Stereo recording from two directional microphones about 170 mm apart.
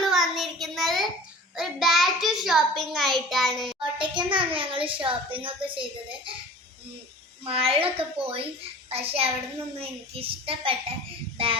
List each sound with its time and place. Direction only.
0.0 s child singing: centre (ahead or behind)
1.5 s a child's voice: centre (ahead or behind)
3.9 s a child's voice: 30° right (ahead or behind)
7.4 s a child's voice: 35° right (ahead or behind)